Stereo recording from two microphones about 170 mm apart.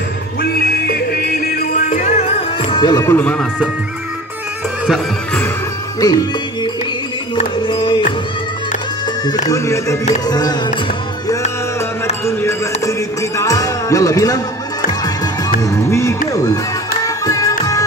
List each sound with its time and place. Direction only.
0.4 s music: 60° left (ahead or behind); by 2.8 s 40° left (ahead or behind)
2.8 s speech: 20° left (ahead or behind)
6.0 s music: 20° left (ahead or behind)
7.3 s music: 25° left (ahead or behind)
9.5 s music: 20° left (ahead or behind)
12.3 s a sound: 15° left (ahead or behind)
13.4 s music: 20° left (ahead or behind)
15.6 s music: 15° left (ahead or behind)